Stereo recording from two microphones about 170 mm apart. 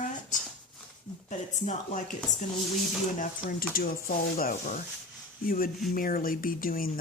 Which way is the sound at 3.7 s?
60° left (ahead or behind).